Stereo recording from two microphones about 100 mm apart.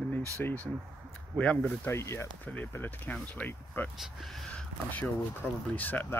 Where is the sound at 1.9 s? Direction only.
25° left (ahead or behind).